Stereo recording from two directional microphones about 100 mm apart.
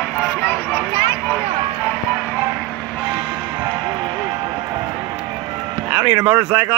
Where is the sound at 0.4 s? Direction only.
20° left (ahead or behind).